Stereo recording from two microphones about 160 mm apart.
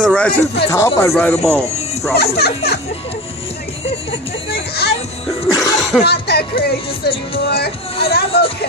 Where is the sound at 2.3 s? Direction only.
85° left.